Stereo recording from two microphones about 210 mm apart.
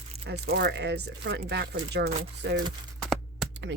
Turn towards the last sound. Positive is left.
turn(degrees=-55)  # may be behind; listen again after turning